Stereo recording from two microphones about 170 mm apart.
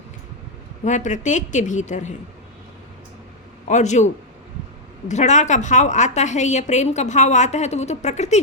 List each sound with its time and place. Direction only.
0.9 s a woman's voice: 45° left (ahead or behind)
3.7 s a woman's voice: 45° left (ahead or behind)